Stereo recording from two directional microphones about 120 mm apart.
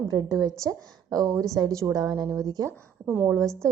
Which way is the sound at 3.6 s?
25° right (ahead or behind).